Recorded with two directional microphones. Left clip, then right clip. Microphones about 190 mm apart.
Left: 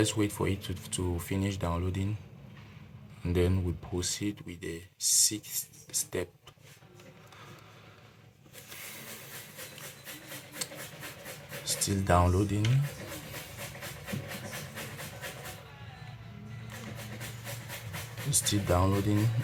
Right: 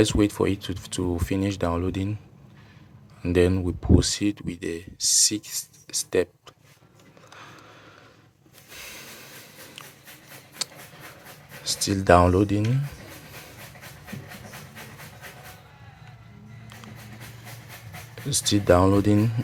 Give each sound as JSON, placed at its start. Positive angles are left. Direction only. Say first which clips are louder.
{"t": 0.0, "sound": "speech", "louder": "right 8 dB", "side_deg": -45}
{"t": 3.2, "sound": "speech", "louder": "right 9 dB", "side_deg": -45}
{"t": 10.6, "sound": "a sound", "louder": "right 8 dB", "side_deg": -50}
{"t": 11.6, "sound": "speech", "louder": "right 10 dB", "side_deg": -45}
{"t": 18.3, "sound": "speech", "louder": "right 10 dB", "side_deg": -45}